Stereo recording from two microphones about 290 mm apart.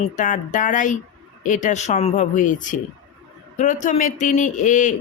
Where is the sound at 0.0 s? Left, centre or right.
Left.